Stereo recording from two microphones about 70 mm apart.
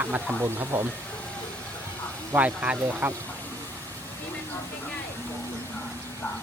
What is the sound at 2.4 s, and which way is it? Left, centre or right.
Speech, right.